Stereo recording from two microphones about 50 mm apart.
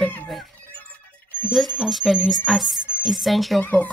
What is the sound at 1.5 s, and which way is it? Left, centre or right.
Speech, centre.